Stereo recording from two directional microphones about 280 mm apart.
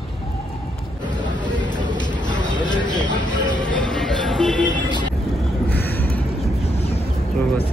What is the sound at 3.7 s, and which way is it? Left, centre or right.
Music, centre.